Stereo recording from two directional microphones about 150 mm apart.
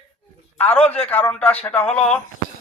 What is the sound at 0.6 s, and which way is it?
A man's voice, 10° left (ahead or behind).